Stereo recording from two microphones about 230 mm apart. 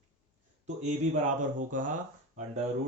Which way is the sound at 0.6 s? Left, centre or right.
Right.